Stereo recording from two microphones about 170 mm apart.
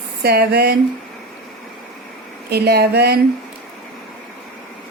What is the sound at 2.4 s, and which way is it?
Speech, 70° right (ahead or behind).